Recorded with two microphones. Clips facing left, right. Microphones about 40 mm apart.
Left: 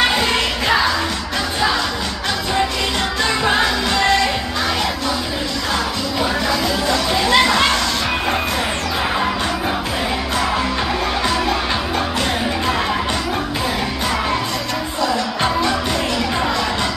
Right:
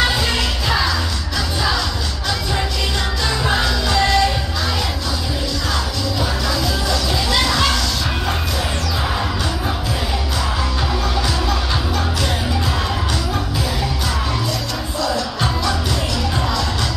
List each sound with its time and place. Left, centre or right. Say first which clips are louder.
0.1 s music: left 2 dB; left
3.3 s music: left 2 dB; left
6.4 s music: left 2 dB; left